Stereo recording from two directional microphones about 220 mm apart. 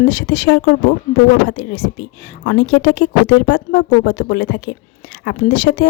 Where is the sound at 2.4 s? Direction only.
50° left (ahead or behind).